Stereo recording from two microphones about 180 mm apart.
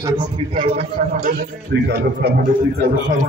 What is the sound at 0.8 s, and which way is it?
Speech, 50° right (ahead or behind).